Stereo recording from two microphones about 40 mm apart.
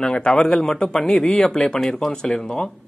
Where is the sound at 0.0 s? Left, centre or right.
Left.